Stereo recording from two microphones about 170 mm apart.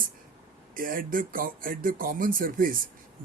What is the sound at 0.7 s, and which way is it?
Speech, 55° right (ahead or behind).